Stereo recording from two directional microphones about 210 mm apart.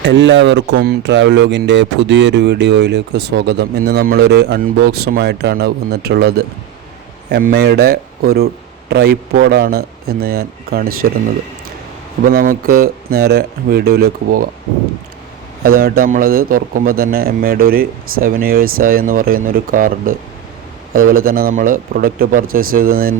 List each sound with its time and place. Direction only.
0.0 s speech: 55° right (ahead or behind)
12.3 s speech: 45° right (ahead or behind)
15.6 s speech: 45° right (ahead or behind)